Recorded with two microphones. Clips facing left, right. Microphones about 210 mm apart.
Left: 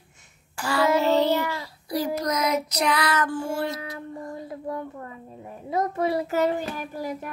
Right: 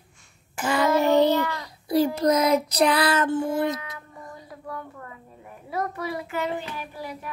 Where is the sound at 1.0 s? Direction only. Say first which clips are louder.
Right 5 dB; 15° right (ahead or behind).